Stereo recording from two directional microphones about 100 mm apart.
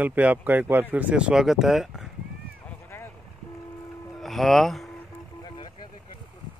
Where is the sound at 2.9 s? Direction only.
25° left (ahead or behind).